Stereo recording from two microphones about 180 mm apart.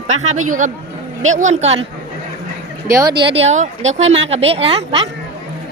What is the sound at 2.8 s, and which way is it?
Speech, 20° right (ahead or behind).